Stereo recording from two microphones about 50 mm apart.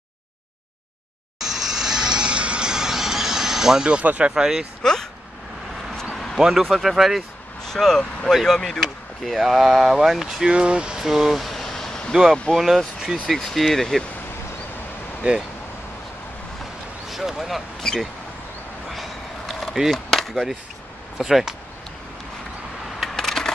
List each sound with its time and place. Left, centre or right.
1.4 s vehicle: centre
4.2 s speech: centre
6.3 s speech: centre
7.6 s speech: centre
10.5 s speech: centre
11.0 s a sound: centre
12.1 s speech: centre
15.2 s speech: right
17.1 s speech: centre
19.9 s skateboard: centre
21.2 s speech: centre
22.9 s coin: centre